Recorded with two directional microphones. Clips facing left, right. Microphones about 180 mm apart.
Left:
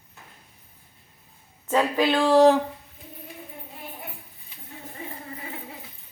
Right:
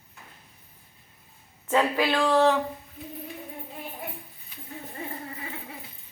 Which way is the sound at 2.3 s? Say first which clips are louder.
Left 6 dB; 35° left (ahead or behind).